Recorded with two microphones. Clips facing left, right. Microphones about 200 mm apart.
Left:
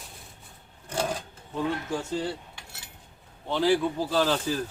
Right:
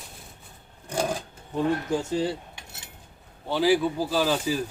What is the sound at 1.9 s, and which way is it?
Speech, 15° right (ahead or behind).